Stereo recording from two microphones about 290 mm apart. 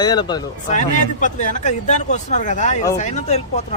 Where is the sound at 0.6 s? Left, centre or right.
Left.